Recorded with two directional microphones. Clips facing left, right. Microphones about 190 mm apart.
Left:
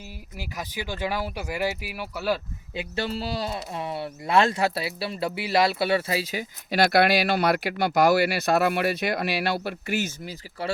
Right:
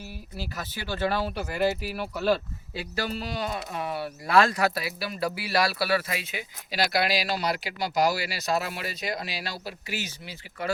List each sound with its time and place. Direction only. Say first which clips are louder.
0.3 s speech: left 2 dB; 15° left (ahead or behind)
2.7 s speech: left 2 dB; 25° left (ahead or behind)
6.7 s speech: left 6 dB; 55° left (ahead or behind)